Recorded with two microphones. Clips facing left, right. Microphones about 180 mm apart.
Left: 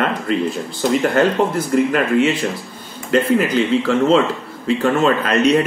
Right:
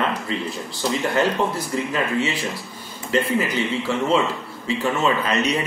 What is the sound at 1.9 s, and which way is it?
Speech, 65° left (ahead or behind).